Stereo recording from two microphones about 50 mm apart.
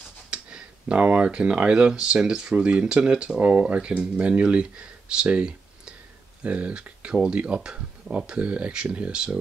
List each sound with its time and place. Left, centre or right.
0.3 s speech: centre